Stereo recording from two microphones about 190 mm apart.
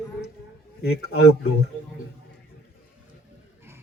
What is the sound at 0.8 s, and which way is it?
Speech, 60° left (ahead or behind).